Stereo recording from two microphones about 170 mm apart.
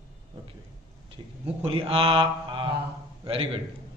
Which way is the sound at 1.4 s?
35° right (ahead or behind).